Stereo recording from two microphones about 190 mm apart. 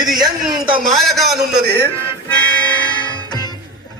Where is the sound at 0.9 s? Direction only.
Centre (ahead or behind).